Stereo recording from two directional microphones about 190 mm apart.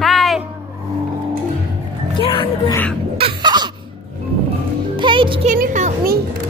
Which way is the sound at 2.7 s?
10° left (ahead or behind).